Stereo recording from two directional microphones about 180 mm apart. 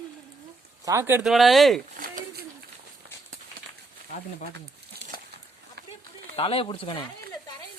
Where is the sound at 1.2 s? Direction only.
Centre (ahead or behind).